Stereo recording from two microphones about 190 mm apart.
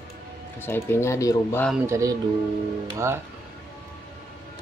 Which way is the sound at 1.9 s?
15° right (ahead or behind).